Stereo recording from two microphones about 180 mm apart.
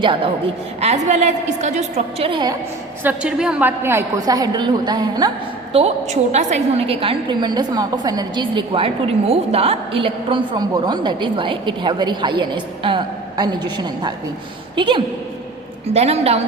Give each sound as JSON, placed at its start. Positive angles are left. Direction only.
{"t": 0.0, "sound": "a woman's voice", "side_deg": -30}
{"t": 0.8, "sound": "a woman's voice", "side_deg": -40}
{"t": 3.0, "sound": "a woman's voice", "side_deg": -10}
{"t": 5.7, "sound": "a woman's voice", "side_deg": -35}